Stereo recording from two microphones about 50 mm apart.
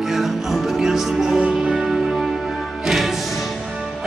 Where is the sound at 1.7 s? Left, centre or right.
Centre.